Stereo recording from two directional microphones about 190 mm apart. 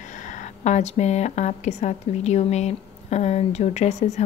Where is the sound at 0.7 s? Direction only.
35° left (ahead or behind).